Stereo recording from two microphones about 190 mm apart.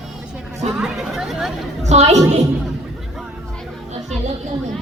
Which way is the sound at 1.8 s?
35° right (ahead or behind).